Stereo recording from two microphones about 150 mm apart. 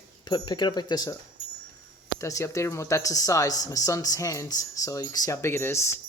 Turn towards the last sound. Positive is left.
turn(degrees=15)  # may be behind; listen again after turning